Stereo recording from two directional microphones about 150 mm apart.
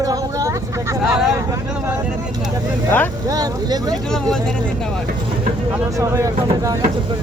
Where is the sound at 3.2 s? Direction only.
25° right (ahead or behind).